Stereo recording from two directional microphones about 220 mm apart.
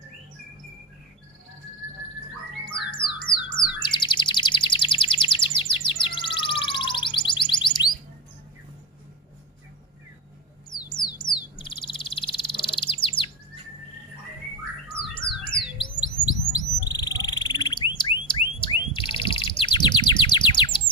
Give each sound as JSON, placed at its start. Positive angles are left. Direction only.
{"t": 2.6, "sound": "music", "side_deg": 20}
{"t": 10.7, "sound": "a sound", "side_deg": 20}
{"t": 14.9, "sound": "squawk", "side_deg": 20}
{"t": 16.0, "sound": "bird", "side_deg": 15}